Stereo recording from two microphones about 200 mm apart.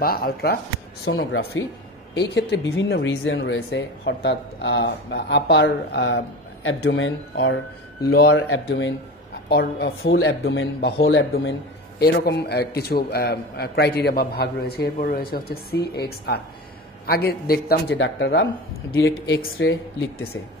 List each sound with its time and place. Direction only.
0.0 s a man's voice: 50° left (ahead or behind)
1.1 s speech: 80° left
2.1 s speech: 60° left (ahead or behind)
8.0 s a man's voice: 50° left (ahead or behind)
9.5 s speech: 55° left (ahead or behind)
12.0 s a man's voice: 50° left (ahead or behind)
18.9 s speech: 70° left (ahead or behind)